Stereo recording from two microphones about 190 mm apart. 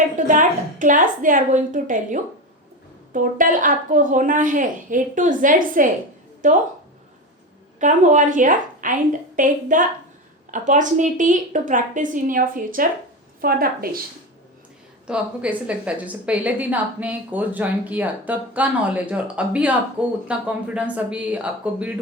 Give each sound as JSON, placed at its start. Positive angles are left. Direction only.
{"t": 0.3, "sound": "a woman's voice", "side_deg": -45}
{"t": 7.8, "sound": "a woman's voice", "side_deg": -40}
{"t": 15.0, "sound": "a woman's voice", "side_deg": -5}